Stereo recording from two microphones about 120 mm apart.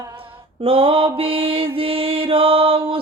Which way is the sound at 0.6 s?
50° right (ahead or behind).